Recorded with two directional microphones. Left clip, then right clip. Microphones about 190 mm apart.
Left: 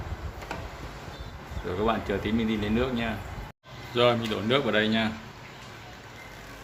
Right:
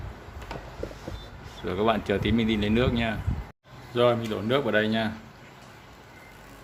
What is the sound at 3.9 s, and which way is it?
A man's voice, 20° right (ahead or behind).